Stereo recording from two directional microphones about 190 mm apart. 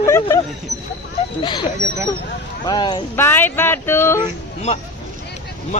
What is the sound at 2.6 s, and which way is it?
Speech, 25° left (ahead or behind).